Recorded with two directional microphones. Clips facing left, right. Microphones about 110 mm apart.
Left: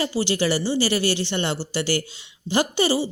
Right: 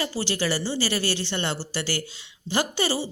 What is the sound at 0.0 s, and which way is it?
A woman's voice, 20° left (ahead or behind).